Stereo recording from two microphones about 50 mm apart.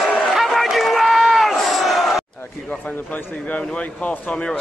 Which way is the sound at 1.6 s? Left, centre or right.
Centre.